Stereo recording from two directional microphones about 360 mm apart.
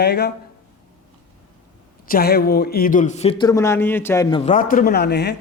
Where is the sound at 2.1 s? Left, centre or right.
Left.